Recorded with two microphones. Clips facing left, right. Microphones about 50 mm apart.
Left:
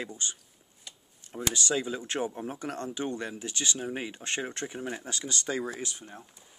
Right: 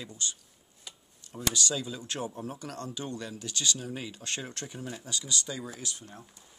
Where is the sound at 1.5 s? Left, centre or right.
Left.